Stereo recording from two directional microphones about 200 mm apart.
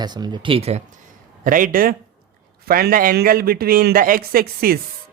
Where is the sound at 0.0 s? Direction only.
20° right (ahead or behind).